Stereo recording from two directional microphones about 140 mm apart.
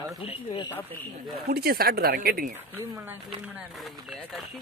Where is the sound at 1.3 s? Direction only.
90° right.